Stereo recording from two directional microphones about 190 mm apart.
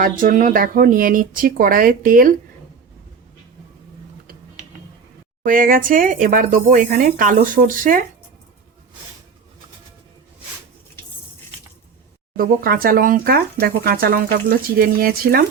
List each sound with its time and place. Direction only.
0.0 s speech: 45° right (ahead or behind)
5.4 s speech: 45° right (ahead or behind)
12.4 s speech: 50° right (ahead or behind)